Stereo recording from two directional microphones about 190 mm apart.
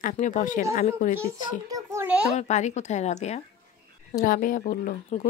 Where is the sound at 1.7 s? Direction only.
15° right (ahead or behind).